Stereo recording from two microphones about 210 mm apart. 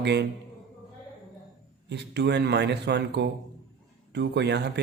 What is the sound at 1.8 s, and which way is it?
A man's voice, 55° right (ahead or behind).